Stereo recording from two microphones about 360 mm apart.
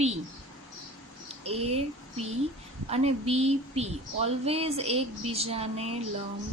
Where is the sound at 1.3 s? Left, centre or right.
Centre.